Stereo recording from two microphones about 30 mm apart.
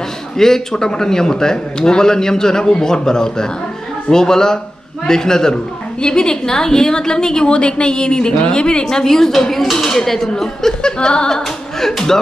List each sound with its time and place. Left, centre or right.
0.4 s a woman's voice: centre; by 8.8 s left
8.8 s speech: centre
10.8 s a woman's voice: left